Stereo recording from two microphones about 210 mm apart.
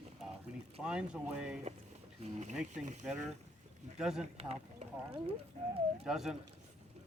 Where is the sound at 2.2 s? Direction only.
35° right (ahead or behind).